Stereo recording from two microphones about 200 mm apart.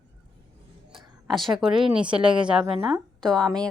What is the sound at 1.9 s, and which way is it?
A woman's voice, 5° right (ahead or behind).